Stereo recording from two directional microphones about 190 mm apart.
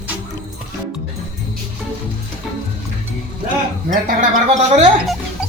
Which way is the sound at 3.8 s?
40° right (ahead or behind).